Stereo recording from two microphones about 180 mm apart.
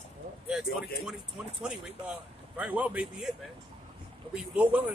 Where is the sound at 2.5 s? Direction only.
5° right (ahead or behind).